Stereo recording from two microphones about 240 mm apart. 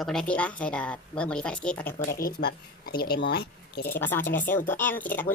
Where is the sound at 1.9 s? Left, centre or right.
Left.